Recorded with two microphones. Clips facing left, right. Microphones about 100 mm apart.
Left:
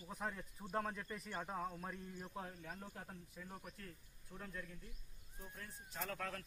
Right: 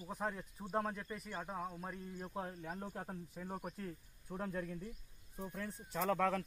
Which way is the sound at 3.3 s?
40° right (ahead or behind).